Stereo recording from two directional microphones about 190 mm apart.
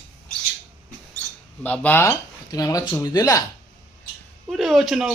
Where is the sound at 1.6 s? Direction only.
10° left (ahead or behind).